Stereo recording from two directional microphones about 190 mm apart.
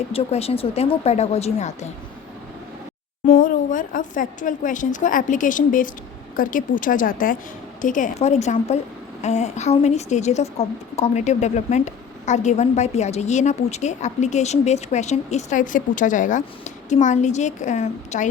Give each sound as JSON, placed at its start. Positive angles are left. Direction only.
{"t": 0.1, "sound": "a woman's voice", "side_deg": 30}
{"t": 3.3, "sound": "a woman's voice", "side_deg": 45}